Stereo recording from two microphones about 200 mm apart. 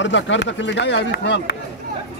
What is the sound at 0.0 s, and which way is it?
Speech, 65° left (ahead or behind).